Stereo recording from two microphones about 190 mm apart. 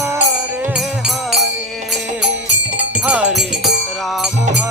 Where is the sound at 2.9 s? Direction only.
5° right (ahead or behind).